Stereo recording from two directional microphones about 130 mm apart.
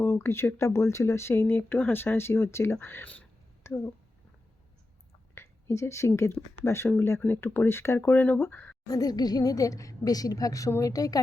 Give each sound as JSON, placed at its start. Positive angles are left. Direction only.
{"t": 0.0, "sound": "speech", "side_deg": 20}
{"t": 5.3, "sound": "a woman's voice", "side_deg": 20}
{"t": 8.9, "sound": "speech", "side_deg": 30}